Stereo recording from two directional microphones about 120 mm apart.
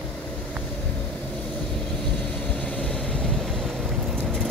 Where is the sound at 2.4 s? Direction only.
10° left (ahead or behind).